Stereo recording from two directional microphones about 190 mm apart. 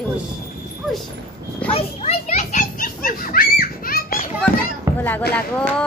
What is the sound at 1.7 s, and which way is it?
Children playing, 30° left (ahead or behind).